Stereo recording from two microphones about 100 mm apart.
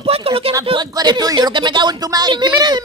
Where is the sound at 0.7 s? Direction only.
45° right (ahead or behind).